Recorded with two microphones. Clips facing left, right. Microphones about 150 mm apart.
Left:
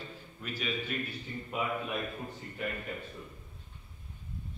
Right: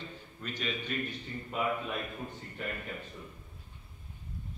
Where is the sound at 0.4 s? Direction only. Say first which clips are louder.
Left 1 dB; 5° left (ahead or behind).